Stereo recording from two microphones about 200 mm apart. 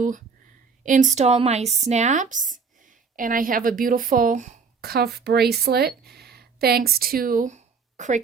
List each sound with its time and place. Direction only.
0.9 s a woman's voice: 40° right (ahead or behind)